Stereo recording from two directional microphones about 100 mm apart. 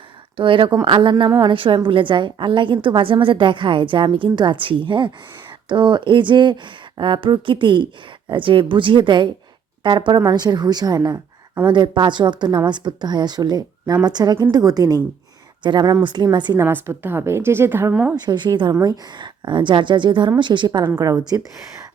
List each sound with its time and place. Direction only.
0.3 s a woman's voice: 60° right (ahead or behind); by 11.2 s 40° right (ahead or behind)
11.7 s a woman's voice: 50° right (ahead or behind)
16.6 s a woman's voice: 25° right (ahead or behind)
17.9 s a woman's voice: 10° right (ahead or behind)
18.3 s a woman's voice: 50° right (ahead or behind)